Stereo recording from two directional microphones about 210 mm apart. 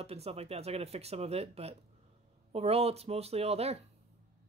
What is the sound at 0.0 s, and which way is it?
Speech, 30° right (ahead or behind).